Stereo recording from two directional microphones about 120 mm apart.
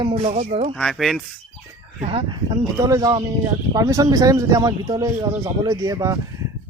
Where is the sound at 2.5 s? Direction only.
30° right (ahead or behind).